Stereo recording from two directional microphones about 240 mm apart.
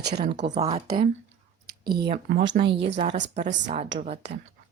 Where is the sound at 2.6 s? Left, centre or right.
Right.